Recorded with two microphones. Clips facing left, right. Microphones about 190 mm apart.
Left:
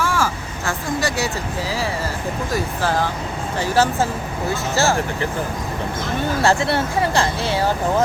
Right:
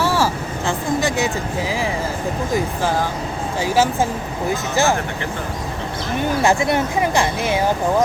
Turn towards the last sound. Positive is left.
turn(degrees=-15)  # may be behind; listen again after turning